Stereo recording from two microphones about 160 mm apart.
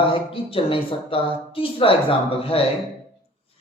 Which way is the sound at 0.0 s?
35° left (ahead or behind).